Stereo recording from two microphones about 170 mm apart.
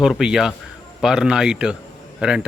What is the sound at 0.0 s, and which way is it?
Speech, 5° right (ahead or behind).